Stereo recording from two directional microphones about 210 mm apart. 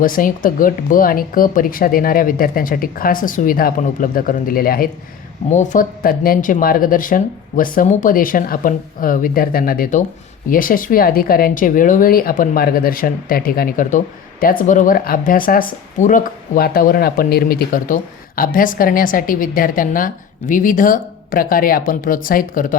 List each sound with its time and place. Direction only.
0.0 s speech: 40° left (ahead or behind)